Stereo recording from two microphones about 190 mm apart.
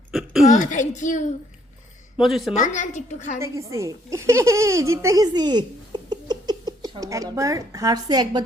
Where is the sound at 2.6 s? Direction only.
40° left (ahead or behind).